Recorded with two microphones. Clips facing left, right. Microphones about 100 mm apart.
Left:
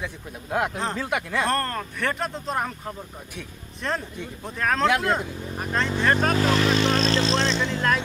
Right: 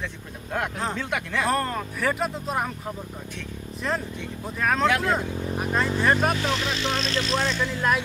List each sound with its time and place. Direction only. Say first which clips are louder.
0.0 s speech: left 1 dB; 5° left (ahead or behind)
3.8 s speech: even; centre (ahead or behind)
6.3 s speech: left 6 dB; 45° left (ahead or behind); by 7.8 s 25° left (ahead or behind)